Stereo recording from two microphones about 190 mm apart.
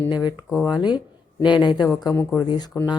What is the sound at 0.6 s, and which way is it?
Speech, 20° left (ahead or behind).